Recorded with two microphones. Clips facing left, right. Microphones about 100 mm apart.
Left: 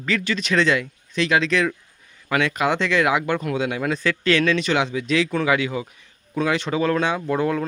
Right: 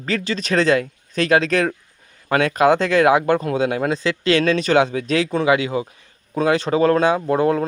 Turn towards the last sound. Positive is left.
turn(degrees=-35)  # may be behind; listen again after turning